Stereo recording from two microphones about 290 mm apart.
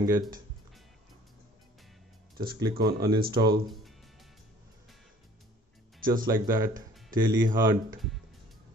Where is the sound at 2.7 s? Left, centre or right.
Right.